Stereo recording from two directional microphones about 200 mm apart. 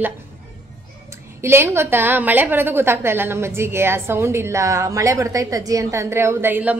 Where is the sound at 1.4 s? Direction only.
10° right (ahead or behind).